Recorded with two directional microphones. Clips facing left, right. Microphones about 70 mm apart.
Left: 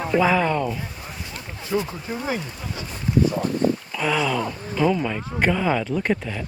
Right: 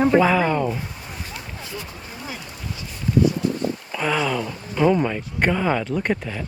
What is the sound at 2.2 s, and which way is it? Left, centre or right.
Speech, left.